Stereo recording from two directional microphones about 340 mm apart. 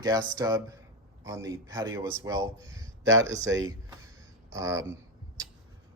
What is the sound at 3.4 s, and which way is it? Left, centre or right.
Speech, right.